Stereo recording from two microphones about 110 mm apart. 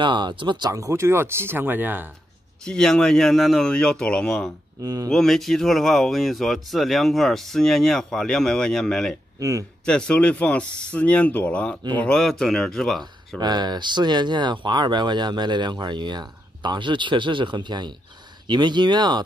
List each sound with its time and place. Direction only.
0.0 s speech: 45° right (ahead or behind); by 2.0 s 15° right (ahead or behind)
2.6 s speech: 5° left (ahead or behind)
4.8 s speech: 35° right (ahead or behind)
5.1 s speech: 5° left (ahead or behind)
9.4 s speech: 30° right (ahead or behind)
9.8 s speech: 10° left (ahead or behind)
13.4 s speech: 40° right (ahead or behind)